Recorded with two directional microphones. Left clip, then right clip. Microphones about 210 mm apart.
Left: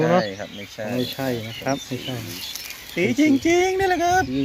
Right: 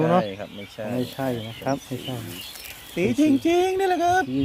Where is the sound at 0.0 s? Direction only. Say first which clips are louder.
Left 2 dB; 5° right (ahead or behind).